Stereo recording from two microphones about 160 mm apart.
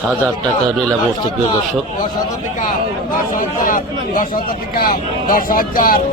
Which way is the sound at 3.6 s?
55° left (ahead or behind).